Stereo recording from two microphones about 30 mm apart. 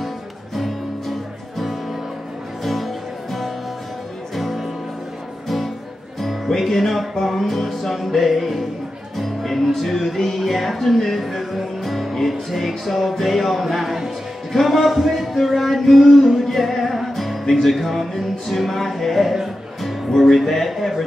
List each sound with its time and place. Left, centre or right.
0.6 s music: centre
2.6 s music: centre
6.6 s music: centre